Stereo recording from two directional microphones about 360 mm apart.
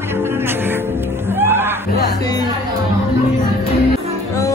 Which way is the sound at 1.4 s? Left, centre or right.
Centre.